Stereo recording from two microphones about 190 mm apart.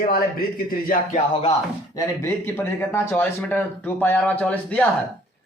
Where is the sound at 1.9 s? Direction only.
15° left (ahead or behind).